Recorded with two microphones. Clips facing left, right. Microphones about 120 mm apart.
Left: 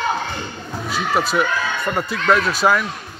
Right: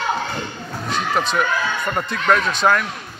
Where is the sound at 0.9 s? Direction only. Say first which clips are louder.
Left 1 dB; 5° left (ahead or behind).